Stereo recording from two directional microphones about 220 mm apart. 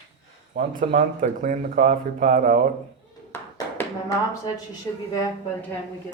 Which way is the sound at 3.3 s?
15° left (ahead or behind).